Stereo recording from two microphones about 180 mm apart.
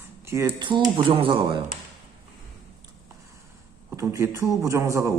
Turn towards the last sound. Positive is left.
turn(degrees=-15)  # may be behind; listen again after turning